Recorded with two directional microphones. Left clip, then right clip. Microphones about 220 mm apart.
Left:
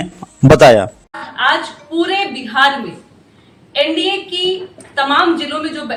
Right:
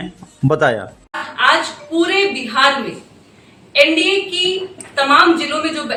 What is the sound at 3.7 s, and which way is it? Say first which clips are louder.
A woman's voice: right 3 dB; centre (ahead or behind).